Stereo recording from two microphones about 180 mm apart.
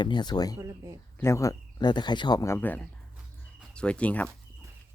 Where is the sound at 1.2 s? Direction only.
15° left (ahead or behind).